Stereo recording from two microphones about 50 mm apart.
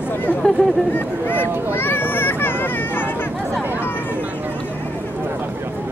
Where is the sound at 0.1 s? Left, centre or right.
Left.